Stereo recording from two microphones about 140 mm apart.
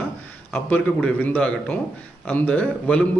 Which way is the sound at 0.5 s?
10° left (ahead or behind).